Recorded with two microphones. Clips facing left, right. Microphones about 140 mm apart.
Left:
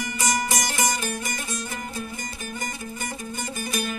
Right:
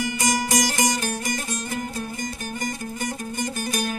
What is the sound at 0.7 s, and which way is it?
Music, 40° right (ahead or behind).